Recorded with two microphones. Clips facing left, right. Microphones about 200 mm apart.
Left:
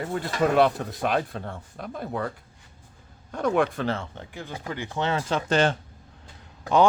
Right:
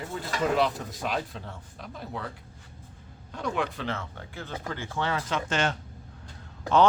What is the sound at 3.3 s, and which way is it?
Speech, 50° left (ahead or behind).